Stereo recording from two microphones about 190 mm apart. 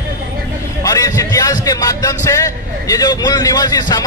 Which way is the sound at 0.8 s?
15° left (ahead or behind).